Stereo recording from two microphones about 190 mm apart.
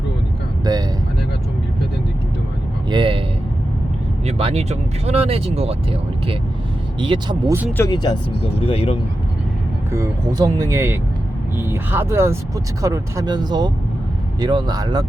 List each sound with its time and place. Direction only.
0.6 s vehicle: 20° right (ahead or behind)
2.9 s a sound: 25° right (ahead or behind)
4.3 s speech: 30° right (ahead or behind)
7.8 s speech: 20° left (ahead or behind)
9.9 s speech: 15° right (ahead or behind)